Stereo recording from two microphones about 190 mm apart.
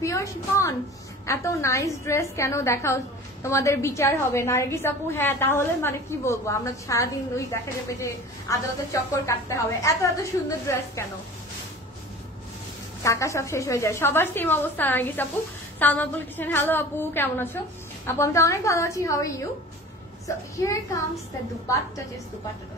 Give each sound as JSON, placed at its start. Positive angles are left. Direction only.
{"t": 0.0, "sound": "a woman's voice", "side_deg": 15}
{"t": 13.0, "sound": "a woman's voice", "side_deg": 15}